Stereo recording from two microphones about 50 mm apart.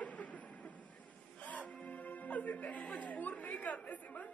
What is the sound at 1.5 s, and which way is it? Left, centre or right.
Music, left.